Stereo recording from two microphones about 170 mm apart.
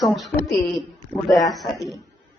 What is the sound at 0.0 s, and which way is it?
A woman's voice, centre (ahead or behind).